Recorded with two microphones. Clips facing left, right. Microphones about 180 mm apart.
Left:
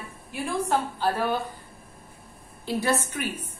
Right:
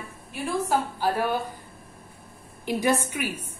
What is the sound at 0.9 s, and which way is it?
Speech, 10° right (ahead or behind).